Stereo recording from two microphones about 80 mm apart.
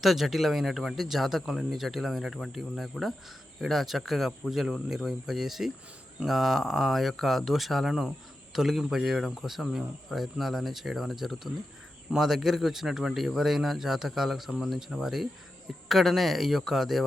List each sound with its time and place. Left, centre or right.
0.0 s speech: centre